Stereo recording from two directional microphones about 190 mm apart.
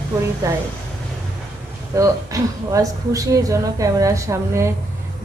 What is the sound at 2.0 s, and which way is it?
Speech, 20° right (ahead or behind).